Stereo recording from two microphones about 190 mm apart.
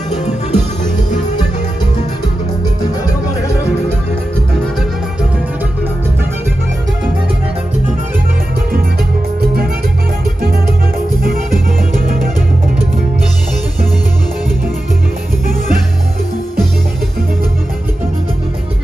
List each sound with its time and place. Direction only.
0.1 s music: 35° left (ahead or behind)